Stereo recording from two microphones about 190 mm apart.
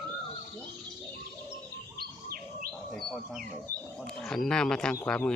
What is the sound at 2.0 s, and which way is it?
Bird, 50° right (ahead or behind).